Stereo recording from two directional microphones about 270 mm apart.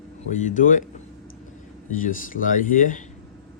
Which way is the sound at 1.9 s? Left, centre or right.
Left.